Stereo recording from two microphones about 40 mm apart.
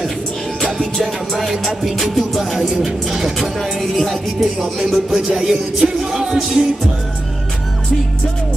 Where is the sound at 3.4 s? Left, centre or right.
Centre.